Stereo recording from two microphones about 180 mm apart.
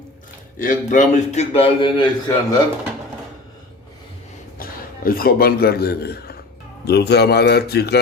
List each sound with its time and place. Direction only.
0.6 s a man's voice: 45° left (ahead or behind); by 2.6 s 25° left (ahead or behind)
4.6 s a man's voice: 55° left (ahead or behind)